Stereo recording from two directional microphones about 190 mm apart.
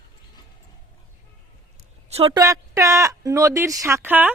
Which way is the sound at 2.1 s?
30° right (ahead or behind).